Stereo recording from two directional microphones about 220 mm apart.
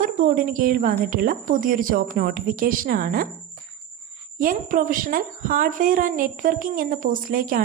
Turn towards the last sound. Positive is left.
turn(degrees=-40)  # may be behind; listen again after turning